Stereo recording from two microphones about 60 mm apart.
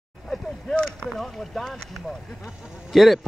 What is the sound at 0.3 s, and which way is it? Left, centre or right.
A man's voice, centre.